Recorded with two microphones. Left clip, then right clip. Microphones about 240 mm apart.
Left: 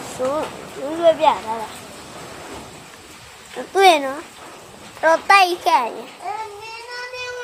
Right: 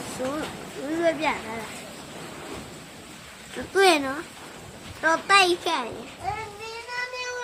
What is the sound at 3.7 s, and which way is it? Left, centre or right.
A child's voice, right.